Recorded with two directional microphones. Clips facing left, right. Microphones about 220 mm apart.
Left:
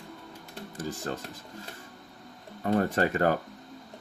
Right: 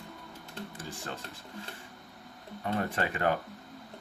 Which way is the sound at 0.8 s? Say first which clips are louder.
Left 10 dB; 40° left (ahead or behind).